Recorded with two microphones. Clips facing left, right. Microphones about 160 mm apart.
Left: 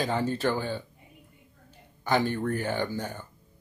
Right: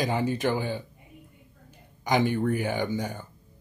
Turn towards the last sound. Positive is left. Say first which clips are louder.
# right 2 dB
turn(degrees=-10)  # may be behind; listen again after turning